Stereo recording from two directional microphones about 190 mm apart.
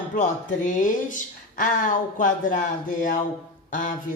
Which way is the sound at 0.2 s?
40° left (ahead or behind).